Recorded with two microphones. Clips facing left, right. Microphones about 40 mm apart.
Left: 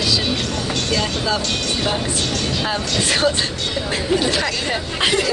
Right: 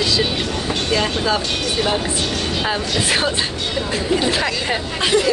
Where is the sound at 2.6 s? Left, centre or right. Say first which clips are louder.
Right 2 dB; centre.